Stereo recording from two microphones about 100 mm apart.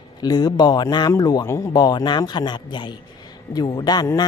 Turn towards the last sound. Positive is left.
turn(degrees=45)  # may be behind; listen again after turning